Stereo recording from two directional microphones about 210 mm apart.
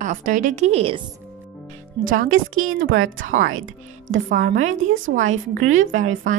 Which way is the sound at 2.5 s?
75° right (ahead or behind).